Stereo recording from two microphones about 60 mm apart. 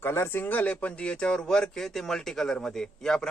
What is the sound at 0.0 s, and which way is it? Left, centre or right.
Speech, left.